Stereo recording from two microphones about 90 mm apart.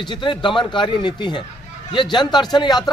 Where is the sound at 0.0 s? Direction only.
60° left (ahead or behind).